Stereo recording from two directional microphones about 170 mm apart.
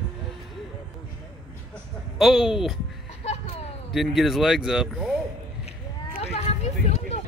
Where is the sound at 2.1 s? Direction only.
Centre (ahead or behind).